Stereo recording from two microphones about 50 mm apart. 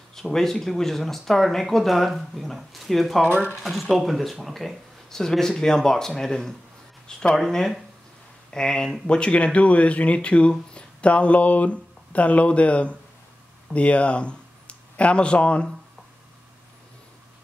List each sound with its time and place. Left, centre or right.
0.1 s speech: centre; by 15.7 s left